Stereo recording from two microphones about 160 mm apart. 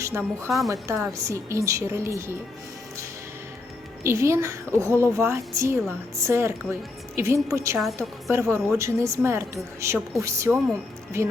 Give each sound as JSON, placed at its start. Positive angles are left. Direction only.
{"t": 0.0, "sound": "a woman's voice", "side_deg": -15}
{"t": 0.4, "sound": "a woman's voice", "side_deg": 0}
{"t": 1.1, "sound": "a woman's voice", "side_deg": -20}
{"t": 4.0, "sound": "a woman's voice", "side_deg": -15}